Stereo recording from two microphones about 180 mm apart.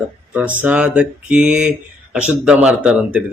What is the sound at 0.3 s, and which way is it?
Speech, 10° right (ahead or behind).